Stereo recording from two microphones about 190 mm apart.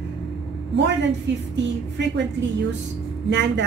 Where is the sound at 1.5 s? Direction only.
70° right (ahead or behind).